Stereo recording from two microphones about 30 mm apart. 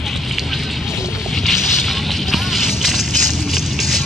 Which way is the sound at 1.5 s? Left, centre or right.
Centre.